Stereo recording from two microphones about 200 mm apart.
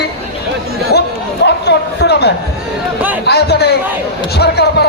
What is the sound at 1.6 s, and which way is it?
Speech, 55° left (ahead or behind).